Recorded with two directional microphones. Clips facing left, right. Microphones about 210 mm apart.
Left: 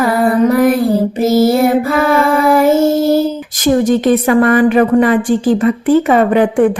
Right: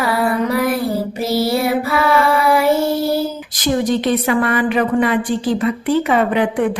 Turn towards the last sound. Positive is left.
turn(degrees=45)  # may be behind; listen again after turning